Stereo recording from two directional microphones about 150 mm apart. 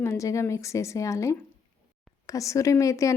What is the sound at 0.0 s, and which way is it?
A woman's voice, 20° left (ahead or behind).